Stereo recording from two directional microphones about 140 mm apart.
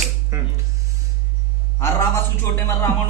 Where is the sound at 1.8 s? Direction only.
20° left (ahead or behind).